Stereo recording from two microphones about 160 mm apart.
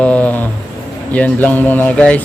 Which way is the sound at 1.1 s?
10° left (ahead or behind).